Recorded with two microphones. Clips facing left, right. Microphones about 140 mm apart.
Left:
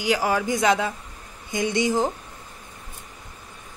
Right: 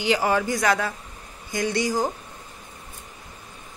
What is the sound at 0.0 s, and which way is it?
Speech, 10° left (ahead or behind).